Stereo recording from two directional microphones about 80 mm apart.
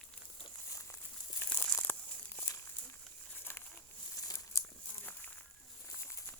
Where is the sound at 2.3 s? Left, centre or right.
Left.